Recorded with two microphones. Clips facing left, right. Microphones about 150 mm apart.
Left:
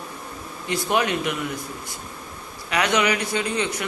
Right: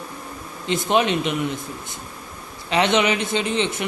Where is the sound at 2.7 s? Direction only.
25° right (ahead or behind).